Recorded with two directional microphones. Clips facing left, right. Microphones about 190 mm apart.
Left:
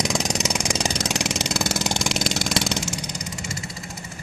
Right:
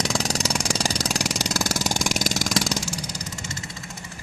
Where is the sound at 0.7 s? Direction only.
35° right (ahead or behind).